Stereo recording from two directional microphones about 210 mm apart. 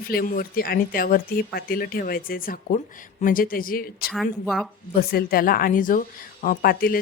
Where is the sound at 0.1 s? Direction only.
45° left (ahead or behind).